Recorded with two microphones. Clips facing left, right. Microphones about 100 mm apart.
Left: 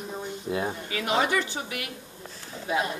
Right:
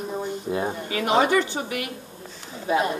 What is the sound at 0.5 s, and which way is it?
Speech, 25° right (ahead or behind).